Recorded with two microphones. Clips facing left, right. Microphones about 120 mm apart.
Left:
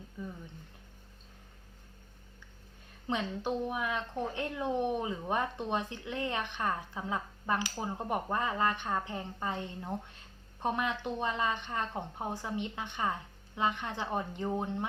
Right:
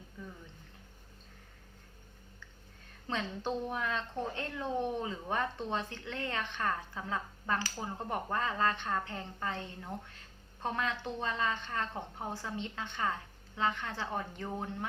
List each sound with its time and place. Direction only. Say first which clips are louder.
3.1 s speech: left 2 dB; 10° left (ahead or behind)